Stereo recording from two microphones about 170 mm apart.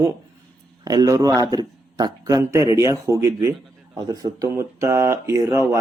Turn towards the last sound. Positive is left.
turn(degrees=-15)  # may be behind; listen again after turning